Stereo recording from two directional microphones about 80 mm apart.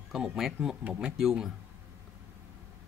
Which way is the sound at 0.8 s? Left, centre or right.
Centre.